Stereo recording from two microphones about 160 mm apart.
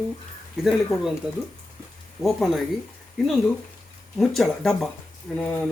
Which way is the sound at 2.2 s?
Centre (ahead or behind).